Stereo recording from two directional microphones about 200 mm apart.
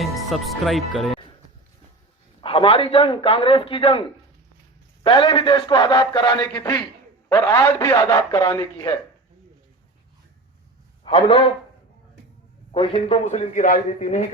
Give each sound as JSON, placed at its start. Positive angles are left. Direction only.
{"t": 0.0, "sound": "speech", "side_deg": 0}
{"t": 2.4, "sound": "a man's voice", "side_deg": 25}
{"t": 5.0, "sound": "a man's voice", "side_deg": 25}
{"t": 11.0, "sound": "a man's voice", "side_deg": 25}
{"t": 12.7, "sound": "speech", "side_deg": 25}